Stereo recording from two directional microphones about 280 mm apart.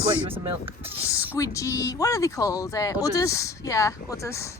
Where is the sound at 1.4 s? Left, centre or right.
Centre.